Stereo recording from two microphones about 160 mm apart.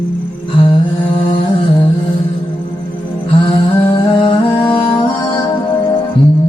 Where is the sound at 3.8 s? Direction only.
35° left (ahead or behind).